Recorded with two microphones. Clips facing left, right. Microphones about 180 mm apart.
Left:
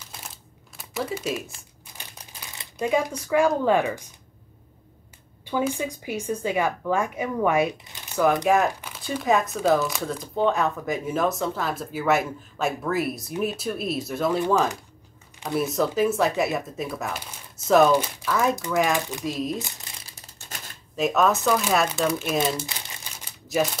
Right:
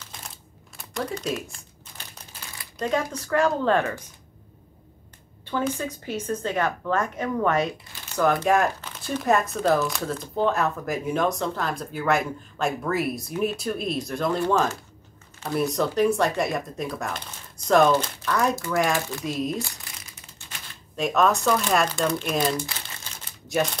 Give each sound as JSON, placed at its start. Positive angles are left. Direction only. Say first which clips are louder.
{"t": 0.7, "sound": "crumpling", "louder": "left 1 dB", "side_deg": 5}
{"t": 2.8, "sound": "a woman's voice", "louder": "left 2 dB", "side_deg": 10}
{"t": 5.4, "sound": "a woman's voice", "louder": "left 1 dB", "side_deg": 10}
{"t": 15.5, "sound": "speech", "louder": "even", "side_deg": 5}
{"t": 19.6, "sound": "speech", "louder": "right 3 dB", "side_deg": 20}
{"t": 20.1, "sound": "typing", "louder": "left 2 dB", "side_deg": 40}
{"t": 20.9, "sound": "speech", "louder": "even", "side_deg": 0}
{"t": 22.7, "sound": "crumpling", "louder": "even", "side_deg": 15}